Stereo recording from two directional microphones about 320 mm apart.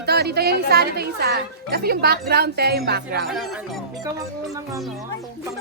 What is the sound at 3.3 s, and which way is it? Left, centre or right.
Speech, centre.